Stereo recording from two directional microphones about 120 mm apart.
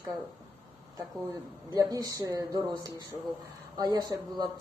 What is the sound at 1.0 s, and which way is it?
Speech, 25° right (ahead or behind).